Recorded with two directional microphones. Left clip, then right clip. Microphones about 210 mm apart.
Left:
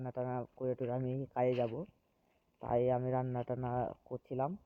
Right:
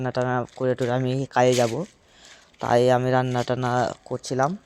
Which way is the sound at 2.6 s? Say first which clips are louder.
Right 14 dB; 35° right (ahead or behind).